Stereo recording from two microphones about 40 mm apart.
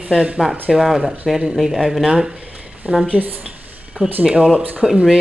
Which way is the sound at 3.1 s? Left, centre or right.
Right.